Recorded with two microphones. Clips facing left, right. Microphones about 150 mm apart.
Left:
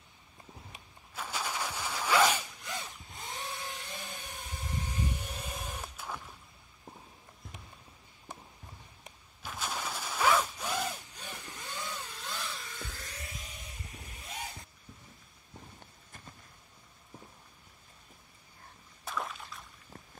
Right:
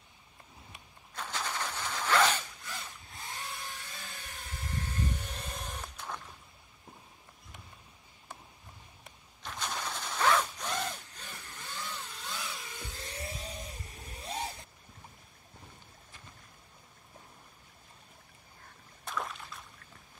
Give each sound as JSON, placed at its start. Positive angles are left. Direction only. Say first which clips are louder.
{"t": 1.1, "sound": "zipper", "louder": "even", "side_deg": 10}
{"t": 9.4, "sound": "mechanisms", "louder": "even", "side_deg": 5}
{"t": 12.5, "sound": "vehicle", "louder": "even", "side_deg": -15}
{"t": 19.0, "sound": "a sound", "louder": "even", "side_deg": 0}